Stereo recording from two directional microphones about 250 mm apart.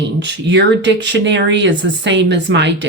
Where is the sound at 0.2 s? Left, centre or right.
Right.